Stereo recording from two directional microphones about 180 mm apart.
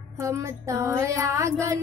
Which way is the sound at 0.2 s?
15° right (ahead or behind).